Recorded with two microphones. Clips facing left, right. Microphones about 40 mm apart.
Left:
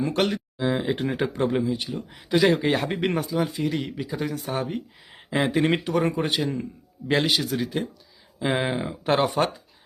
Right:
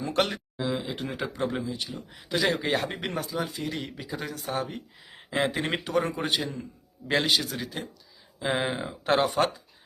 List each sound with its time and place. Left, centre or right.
0.0 s speech: centre
0.6 s speech: left
1.4 s speech: centre
3.0 s speech: centre